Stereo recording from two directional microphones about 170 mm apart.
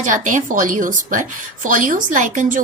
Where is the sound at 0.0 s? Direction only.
50° right (ahead or behind).